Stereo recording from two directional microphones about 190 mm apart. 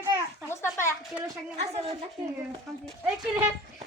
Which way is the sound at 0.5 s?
15° left (ahead or behind).